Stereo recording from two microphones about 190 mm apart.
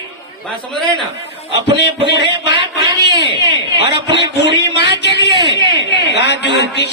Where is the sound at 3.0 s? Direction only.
65° left (ahead or behind).